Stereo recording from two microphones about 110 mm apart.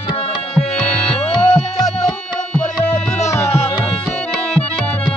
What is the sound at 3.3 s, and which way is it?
Music, 25° left (ahead or behind).